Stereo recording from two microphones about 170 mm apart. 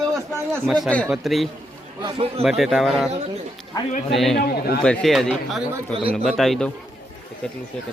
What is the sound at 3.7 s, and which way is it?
Speech, 20° left (ahead or behind).